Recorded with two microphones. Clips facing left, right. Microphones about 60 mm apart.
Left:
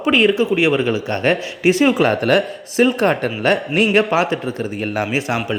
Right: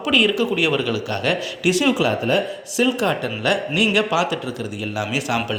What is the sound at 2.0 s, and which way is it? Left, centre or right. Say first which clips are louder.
Speech: left 4 dB; left.